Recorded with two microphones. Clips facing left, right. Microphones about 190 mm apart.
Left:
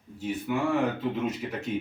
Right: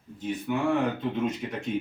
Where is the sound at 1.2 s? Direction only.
Centre (ahead or behind).